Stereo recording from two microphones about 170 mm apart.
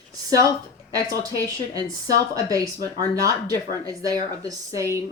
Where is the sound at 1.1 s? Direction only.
20° right (ahead or behind).